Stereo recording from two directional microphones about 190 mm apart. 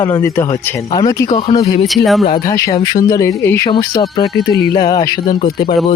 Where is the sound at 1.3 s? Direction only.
30° left (ahead or behind).